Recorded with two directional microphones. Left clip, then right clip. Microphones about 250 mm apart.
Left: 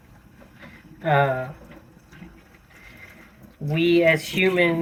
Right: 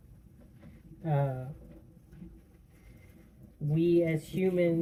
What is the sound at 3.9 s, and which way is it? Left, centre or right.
Speech, left.